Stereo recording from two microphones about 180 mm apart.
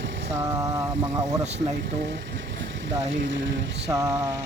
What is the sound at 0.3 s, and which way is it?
Vehicle, 15° right (ahead or behind).